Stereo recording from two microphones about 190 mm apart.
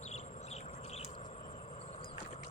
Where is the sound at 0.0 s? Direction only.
35° left (ahead or behind).